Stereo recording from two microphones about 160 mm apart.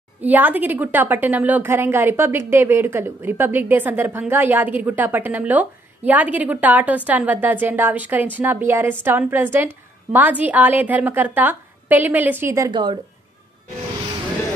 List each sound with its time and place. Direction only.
0.2 s a woman's voice: 10° right (ahead or behind)
12.7 s speech: 30° right (ahead or behind)